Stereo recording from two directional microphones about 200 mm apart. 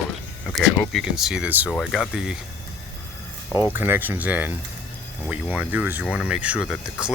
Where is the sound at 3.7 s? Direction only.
10° right (ahead or behind).